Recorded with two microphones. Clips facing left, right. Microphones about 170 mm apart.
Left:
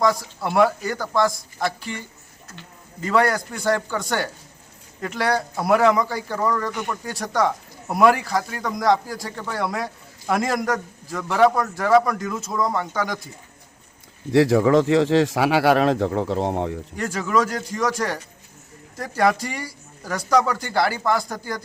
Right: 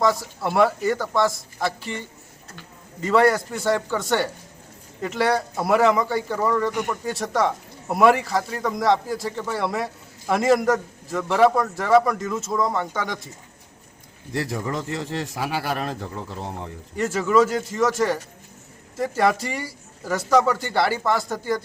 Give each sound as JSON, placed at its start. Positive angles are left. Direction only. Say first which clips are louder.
{"t": 0.0, "sound": "a man's voice", "louder": "even", "side_deg": 0}
{"t": 3.0, "sound": "a man's voice", "louder": "right 2 dB", "side_deg": 0}
{"t": 6.7, "sound": "speech", "louder": "right 2 dB", "side_deg": -15}
{"t": 7.0, "sound": "a man's voice", "louder": "left 2 dB", "side_deg": 0}
{"t": 14.3, "sound": "speech", "louder": "left 12 dB", "side_deg": 90}
{"t": 17.0, "sound": "a man's voice", "louder": "right 3 dB", "side_deg": 0}